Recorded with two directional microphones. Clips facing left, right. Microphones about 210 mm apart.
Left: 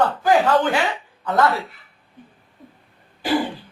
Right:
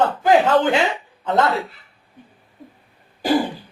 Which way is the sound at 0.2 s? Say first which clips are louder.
Right 3 dB; 25° right (ahead or behind).